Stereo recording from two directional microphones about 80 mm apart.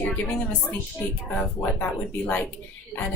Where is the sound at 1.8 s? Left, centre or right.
Centre.